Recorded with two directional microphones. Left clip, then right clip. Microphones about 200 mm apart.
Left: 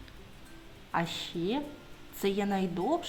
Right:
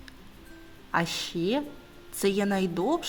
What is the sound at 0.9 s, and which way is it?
A woman's voice, 30° right (ahead or behind).